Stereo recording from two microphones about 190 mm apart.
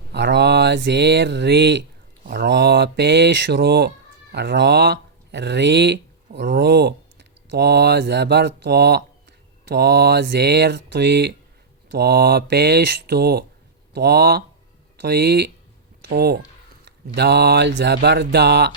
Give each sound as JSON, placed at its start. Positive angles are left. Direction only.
{"t": 0.1, "sound": "mantra", "side_deg": -65}
{"t": 2.2, "sound": "speech", "side_deg": -60}